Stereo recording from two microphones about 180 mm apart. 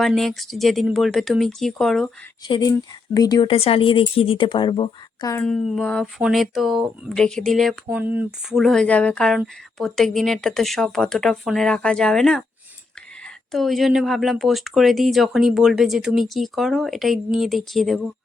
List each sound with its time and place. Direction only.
0.0 s speech: centre (ahead or behind)
2.5 s speech: 20° left (ahead or behind)
5.3 s speech: 5° left (ahead or behind)
7.9 s speech: 10° right (ahead or behind)
13.5 s speech: centre (ahead or behind)